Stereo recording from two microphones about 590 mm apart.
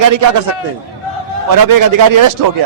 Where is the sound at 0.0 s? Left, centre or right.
Right.